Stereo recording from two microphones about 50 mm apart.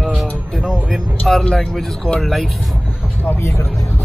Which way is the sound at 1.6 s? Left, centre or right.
Centre.